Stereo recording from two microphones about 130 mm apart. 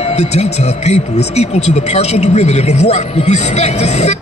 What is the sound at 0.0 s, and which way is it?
Speech, 55° left (ahead or behind).